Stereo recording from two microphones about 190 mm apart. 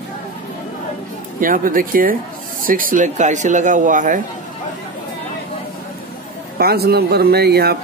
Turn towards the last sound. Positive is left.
turn(degrees=-55)  # may be behind; listen again after turning